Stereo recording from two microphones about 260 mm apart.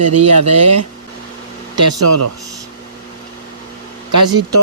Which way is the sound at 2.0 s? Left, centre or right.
Right.